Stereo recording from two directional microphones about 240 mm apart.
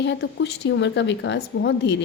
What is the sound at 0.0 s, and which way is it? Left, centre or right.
A woman's voice, left.